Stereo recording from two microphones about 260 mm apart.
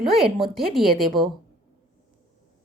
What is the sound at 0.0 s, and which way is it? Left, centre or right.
A woman's voice, centre.